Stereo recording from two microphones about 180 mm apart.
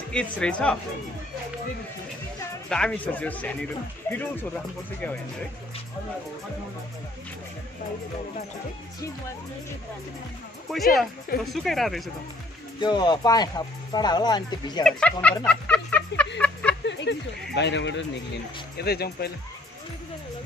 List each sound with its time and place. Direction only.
0.1 s speech: 5° left (ahead or behind)
2.7 s speech: 5° left (ahead or behind)
10.7 s speech: centre (ahead or behind)
12.8 s speech: 25° left (ahead or behind)
14.8 s speech: 5° left (ahead or behind)
15.4 s a sound: 5° left (ahead or behind)
16.8 s a sound: 80° left
17.6 s speech: 80° left
18.8 s speech: 60° left (ahead or behind)